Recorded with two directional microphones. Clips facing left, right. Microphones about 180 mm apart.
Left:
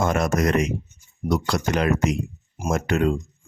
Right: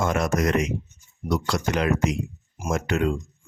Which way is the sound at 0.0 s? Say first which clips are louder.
Left 2 dB; 45° left (ahead or behind).